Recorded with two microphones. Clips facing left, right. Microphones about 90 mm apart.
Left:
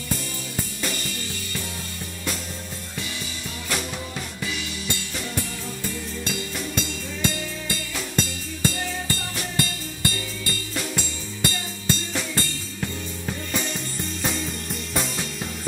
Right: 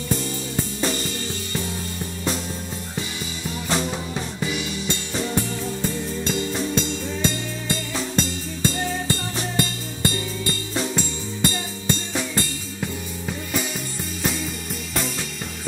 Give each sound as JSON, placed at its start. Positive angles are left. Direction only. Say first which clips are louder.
{"t": 0.7, "sound": "music", "louder": "right 5 dB", "side_deg": -25}
{"t": 3.6, "sound": "music", "louder": "right 5 dB", "side_deg": -25}
{"t": 13.5, "sound": "music", "louder": "right 2 dB", "side_deg": -5}